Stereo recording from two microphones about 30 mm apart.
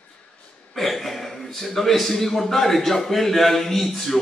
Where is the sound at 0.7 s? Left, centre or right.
Centre.